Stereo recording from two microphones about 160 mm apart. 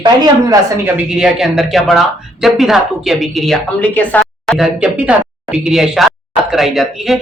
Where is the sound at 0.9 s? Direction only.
5° right (ahead or behind).